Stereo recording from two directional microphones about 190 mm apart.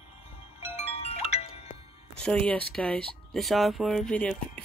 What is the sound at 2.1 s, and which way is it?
Speech, 5° left (ahead or behind).